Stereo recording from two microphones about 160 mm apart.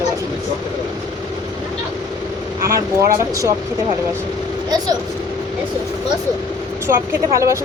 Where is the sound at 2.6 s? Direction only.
20° right (ahead or behind).